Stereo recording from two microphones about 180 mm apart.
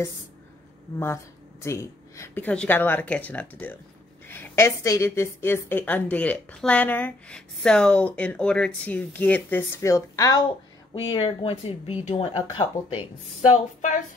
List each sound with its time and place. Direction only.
0.9 s a woman's voice: 15° left (ahead or behind)
11.1 s speech: 30° left (ahead or behind)
13.5 s speech: 45° left (ahead or behind)